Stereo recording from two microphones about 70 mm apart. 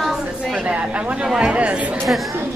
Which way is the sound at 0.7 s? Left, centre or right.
Centre.